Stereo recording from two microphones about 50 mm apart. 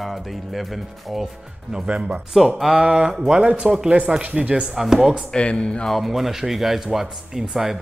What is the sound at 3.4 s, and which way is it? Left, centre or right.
Speech, right.